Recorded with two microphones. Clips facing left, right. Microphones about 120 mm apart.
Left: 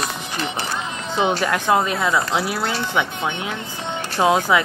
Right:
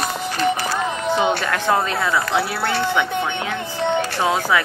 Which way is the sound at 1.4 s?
20° left (ahead or behind).